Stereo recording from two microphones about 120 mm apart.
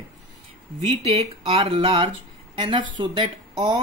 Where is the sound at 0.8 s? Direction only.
60° right (ahead or behind); by 3.8 s 40° right (ahead or behind).